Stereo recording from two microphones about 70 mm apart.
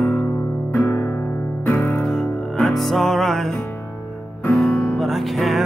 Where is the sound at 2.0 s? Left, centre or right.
Centre.